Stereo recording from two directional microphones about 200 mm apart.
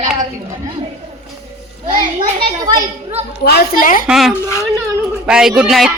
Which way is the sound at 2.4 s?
20° right (ahead or behind).